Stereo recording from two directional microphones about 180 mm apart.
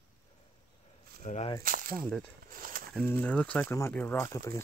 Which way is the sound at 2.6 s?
50° right (ahead or behind).